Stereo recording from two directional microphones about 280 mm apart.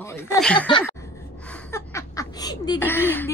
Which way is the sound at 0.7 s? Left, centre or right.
Centre.